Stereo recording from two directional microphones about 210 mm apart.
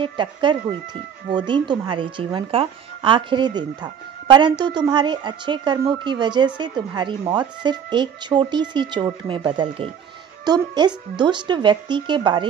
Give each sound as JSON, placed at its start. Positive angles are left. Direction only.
{"t": 0.0, "sound": "a woman's voice", "side_deg": -20}